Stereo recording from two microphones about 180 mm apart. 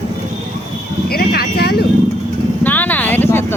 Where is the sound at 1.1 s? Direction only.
55° left (ahead or behind).